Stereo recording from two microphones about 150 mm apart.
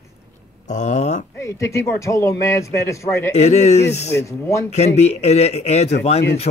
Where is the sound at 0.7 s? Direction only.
50° left (ahead or behind).